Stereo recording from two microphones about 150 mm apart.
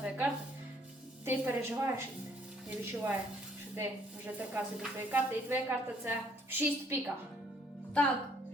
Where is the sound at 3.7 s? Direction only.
15° right (ahead or behind).